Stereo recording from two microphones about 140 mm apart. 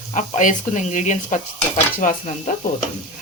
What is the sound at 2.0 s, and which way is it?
Sizzle, 75° left (ahead or behind).